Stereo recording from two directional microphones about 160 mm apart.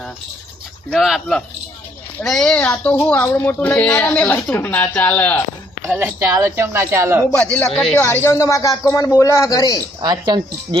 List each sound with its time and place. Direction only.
0.9 s a woman's voice: centre (ahead or behind)
6.0 s speech: 15° right (ahead or behind)
7.3 s a woman's voice: 5° left (ahead or behind); by 9.8 s 20° left (ahead or behind)
10.0 s speech: 25° right (ahead or behind)